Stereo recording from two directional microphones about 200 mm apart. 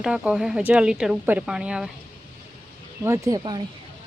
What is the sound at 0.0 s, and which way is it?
Speech, 5° right (ahead or behind).